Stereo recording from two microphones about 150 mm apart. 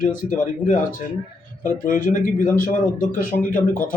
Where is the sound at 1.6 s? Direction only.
65° left (ahead or behind).